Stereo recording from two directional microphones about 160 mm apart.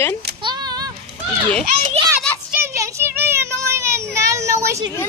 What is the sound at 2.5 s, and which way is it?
Child singing, 15° right (ahead or behind).